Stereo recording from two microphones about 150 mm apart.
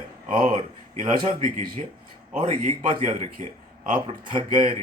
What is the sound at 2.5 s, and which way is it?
A man's voice, 55° right (ahead or behind).